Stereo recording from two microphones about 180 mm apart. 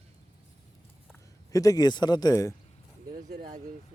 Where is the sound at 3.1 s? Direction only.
45° right (ahead or behind).